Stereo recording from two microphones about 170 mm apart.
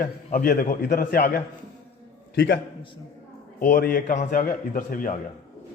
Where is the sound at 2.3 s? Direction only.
90° left.